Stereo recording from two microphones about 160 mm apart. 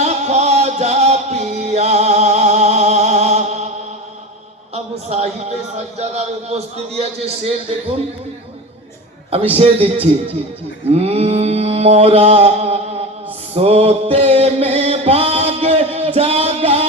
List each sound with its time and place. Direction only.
0.0 s music: 45° right (ahead or behind)
4.7 s a man's voice: 40° right (ahead or behind)
9.6 s mantra: 35° right (ahead or behind)
13.5 s music: 40° right (ahead or behind)